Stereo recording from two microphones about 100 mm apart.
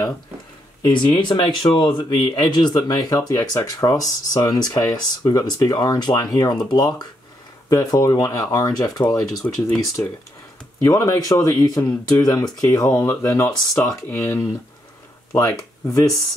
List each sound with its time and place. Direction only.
0.8 s speech: 50° left (ahead or behind)
10.0 s speech: 20° left (ahead or behind)
10.8 s speech: 30° left (ahead or behind)